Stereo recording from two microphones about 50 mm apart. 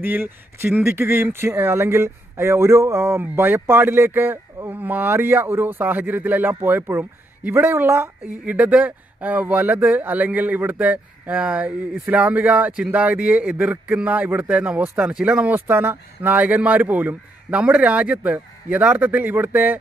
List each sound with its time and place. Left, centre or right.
0.0 s a man's voice: right
4.6 s a man's voice: right
8.5 s a man's voice: right
15.5 s speech: right
17.6 s a man's voice: right